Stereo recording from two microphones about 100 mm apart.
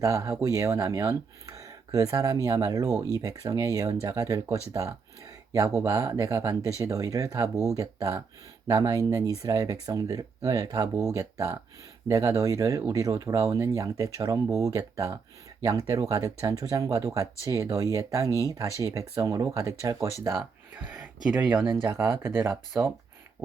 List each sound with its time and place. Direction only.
0.0 s speech: 30° right (ahead or behind)
18.3 s speech: 35° left (ahead or behind)
18.8 s speech: 30° right (ahead or behind)
20.7 s speech: 15° right (ahead or behind)
21.9 s speech: 25° right (ahead or behind)